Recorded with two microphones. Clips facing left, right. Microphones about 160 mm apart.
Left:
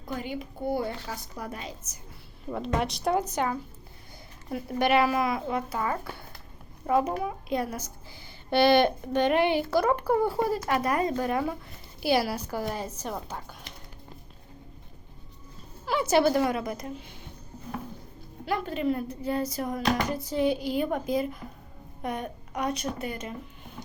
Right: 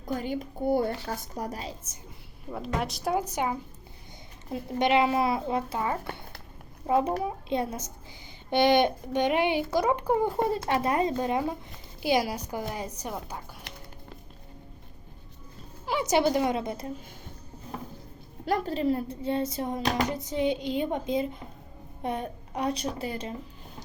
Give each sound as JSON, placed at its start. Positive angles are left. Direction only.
{"t": 0.0, "sound": "a woman's voice", "side_deg": -40}
{"t": 2.5, "sound": "a woman's voice", "side_deg": 0}
{"t": 15.9, "sound": "speech", "side_deg": -15}
{"t": 18.4, "sound": "speech", "side_deg": -40}